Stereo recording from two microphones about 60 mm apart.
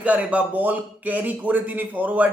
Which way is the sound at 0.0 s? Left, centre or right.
Right.